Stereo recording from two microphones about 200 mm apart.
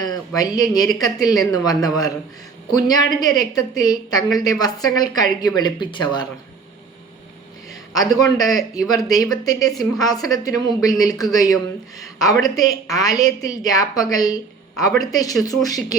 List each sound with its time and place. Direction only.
0.0 s a woman's voice: 20° left (ahead or behind)
7.7 s a man's voice: 20° left (ahead or behind)